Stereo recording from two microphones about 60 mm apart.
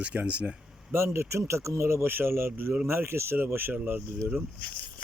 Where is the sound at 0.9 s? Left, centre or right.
Right.